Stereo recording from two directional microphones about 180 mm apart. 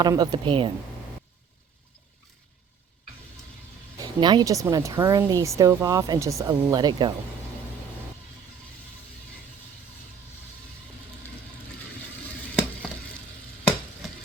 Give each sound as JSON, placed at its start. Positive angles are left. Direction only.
{"t": 0.0, "sound": "speech", "side_deg": -20}
{"t": 4.0, "sound": "speech", "side_deg": -25}